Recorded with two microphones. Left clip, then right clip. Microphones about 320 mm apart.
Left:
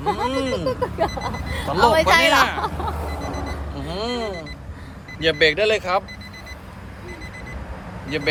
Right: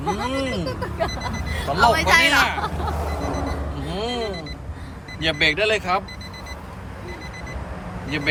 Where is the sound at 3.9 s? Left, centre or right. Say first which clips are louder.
Left 1 dB; centre.